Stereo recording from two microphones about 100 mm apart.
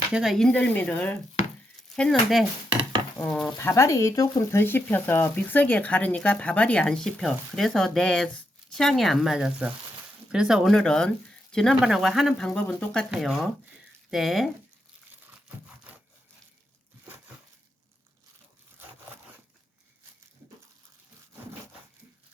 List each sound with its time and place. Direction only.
0.1 s speech: centre (ahead or behind)
0.5 s speech: 15° left (ahead or behind)
2.0 s speech: 5° left (ahead or behind)
3.6 s speech: 30° left (ahead or behind)
4.6 s speech: 20° left (ahead or behind); by 12.5 s centre (ahead or behind)
12.5 s speech: 10° left (ahead or behind)
13.1 s speech: centre (ahead or behind)